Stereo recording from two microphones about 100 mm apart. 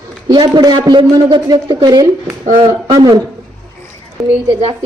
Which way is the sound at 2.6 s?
35° right (ahead or behind).